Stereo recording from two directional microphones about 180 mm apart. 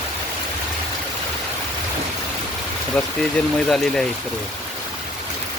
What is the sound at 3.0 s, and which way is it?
Speech, 5° left (ahead or behind).